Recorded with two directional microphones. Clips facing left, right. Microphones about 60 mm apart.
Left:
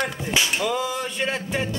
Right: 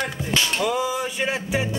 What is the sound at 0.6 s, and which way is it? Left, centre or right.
Music, centre.